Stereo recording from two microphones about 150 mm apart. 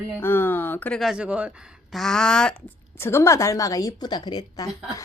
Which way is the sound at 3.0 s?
15° left (ahead or behind).